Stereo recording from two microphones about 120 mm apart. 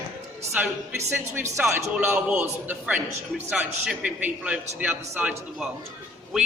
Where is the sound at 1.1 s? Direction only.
20° right (ahead or behind).